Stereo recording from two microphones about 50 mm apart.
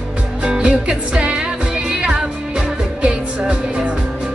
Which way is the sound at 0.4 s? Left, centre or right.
Centre.